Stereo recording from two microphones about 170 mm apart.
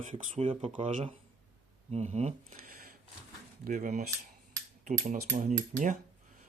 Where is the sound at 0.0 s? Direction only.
45° right (ahead or behind).